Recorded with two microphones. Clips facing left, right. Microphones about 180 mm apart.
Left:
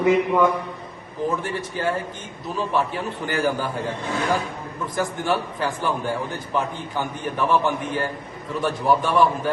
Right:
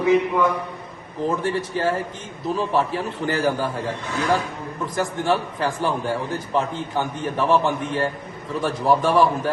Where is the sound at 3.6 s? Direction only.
Centre (ahead or behind).